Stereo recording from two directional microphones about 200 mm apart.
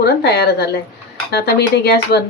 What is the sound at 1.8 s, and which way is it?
Speech, 55° left (ahead or behind).